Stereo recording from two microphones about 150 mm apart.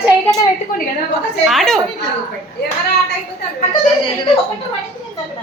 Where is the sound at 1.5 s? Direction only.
Centre (ahead or behind).